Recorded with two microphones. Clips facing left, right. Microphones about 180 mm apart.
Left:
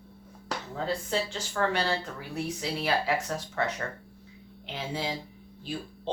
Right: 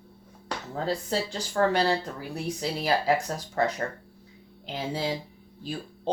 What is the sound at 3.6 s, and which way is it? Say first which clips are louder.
Speech: right 6 dB; 35° right (ahead or behind).